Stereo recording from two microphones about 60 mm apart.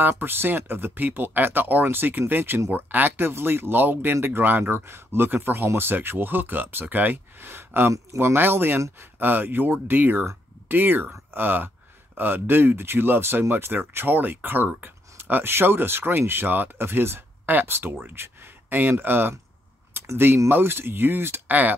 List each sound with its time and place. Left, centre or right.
0.0 s speech: right
19.9 s a sound: right
20.4 s speech: right